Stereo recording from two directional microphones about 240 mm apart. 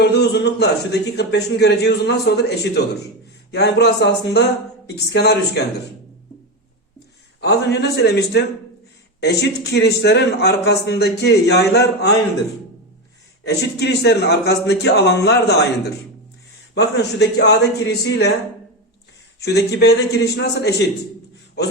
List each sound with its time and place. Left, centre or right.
0.0 s a man's voice: left
7.4 s a man's voice: left
13.4 s a man's voice: left
16.7 s a man's voice: left
19.4 s a man's voice: left